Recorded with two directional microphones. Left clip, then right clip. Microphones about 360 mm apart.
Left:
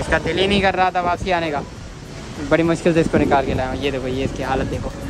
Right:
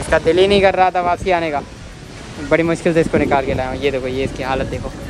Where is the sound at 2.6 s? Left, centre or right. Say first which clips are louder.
Right 1 dB; centre.